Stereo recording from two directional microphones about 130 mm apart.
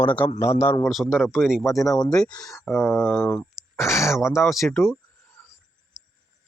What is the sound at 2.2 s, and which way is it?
Speech, 10° left (ahead or behind).